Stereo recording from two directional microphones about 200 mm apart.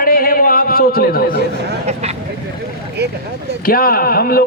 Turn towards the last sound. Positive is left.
turn(degrees=50)  # may be behind; listen again after turning